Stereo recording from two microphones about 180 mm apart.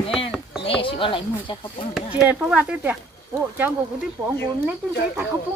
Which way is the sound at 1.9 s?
5° right (ahead or behind).